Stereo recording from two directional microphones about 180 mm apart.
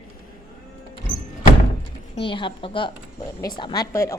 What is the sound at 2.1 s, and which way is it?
A woman's voice, 30° left (ahead or behind).